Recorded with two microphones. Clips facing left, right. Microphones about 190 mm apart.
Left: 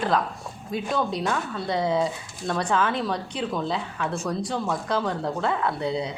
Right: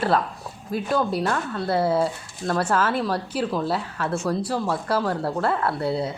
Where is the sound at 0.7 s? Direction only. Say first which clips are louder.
Right 3 dB; 5° right (ahead or behind).